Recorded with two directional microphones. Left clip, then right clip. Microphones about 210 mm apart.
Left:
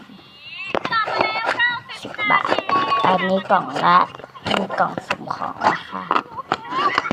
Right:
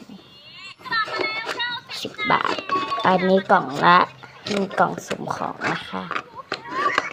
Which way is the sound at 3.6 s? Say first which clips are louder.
Even; 25° right (ahead or behind).